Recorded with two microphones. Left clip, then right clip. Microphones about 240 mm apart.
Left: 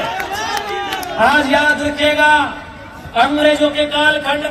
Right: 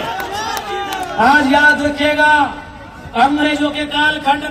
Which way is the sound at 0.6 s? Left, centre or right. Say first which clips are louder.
Even; right.